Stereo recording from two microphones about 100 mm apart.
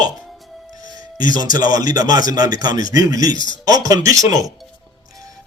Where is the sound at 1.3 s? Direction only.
45° right (ahead or behind).